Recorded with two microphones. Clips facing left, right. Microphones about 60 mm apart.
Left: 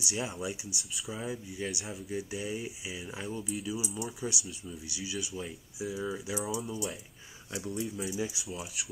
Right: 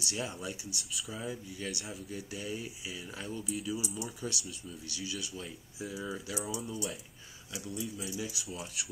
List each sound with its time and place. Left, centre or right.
0.0 s speech: centre
0.7 s speech: centre
1.1 s speech: centre
3.4 s speech: centre
4.2 s speech: centre
7.5 s speech: left
8.0 s speech: left
8.5 s speech: centre